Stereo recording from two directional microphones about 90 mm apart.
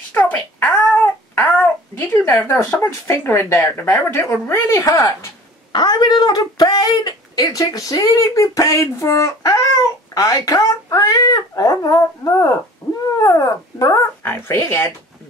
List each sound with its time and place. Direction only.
0.1 s a sound: 20° left (ahead or behind)
2.8 s speech: 25° left (ahead or behind)
5.7 s speech: 50° left (ahead or behind)
12.8 s cat: 35° left (ahead or behind)
13.2 s dog: 40° left (ahead or behind)
14.2 s speech: 25° left (ahead or behind)